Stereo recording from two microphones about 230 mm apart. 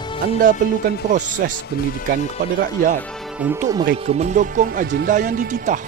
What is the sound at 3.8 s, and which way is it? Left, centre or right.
Speech, right.